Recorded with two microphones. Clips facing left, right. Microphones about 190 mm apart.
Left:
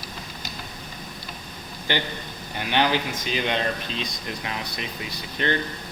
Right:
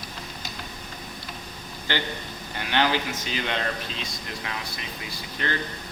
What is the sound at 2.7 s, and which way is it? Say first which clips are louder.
Speech: left 1 dB; 15° left (ahead or behind).